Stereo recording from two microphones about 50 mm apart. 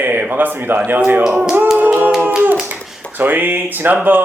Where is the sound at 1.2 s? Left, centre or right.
Right.